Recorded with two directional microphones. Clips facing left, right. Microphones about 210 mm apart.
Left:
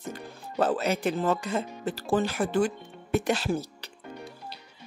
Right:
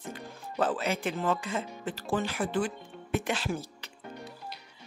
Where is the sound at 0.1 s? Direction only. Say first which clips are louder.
Left 3 dB; 40° left (ahead or behind).